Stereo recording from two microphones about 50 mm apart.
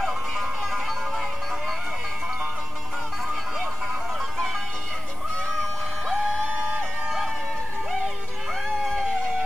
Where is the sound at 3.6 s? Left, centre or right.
Right.